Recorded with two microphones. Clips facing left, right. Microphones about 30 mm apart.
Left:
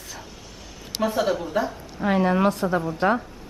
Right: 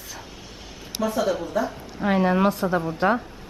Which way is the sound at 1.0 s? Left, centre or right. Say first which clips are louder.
Left 1 dB; left.